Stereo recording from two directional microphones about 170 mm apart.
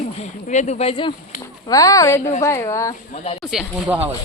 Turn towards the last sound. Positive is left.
turn(degrees=-5)  # may be behind; listen again after turning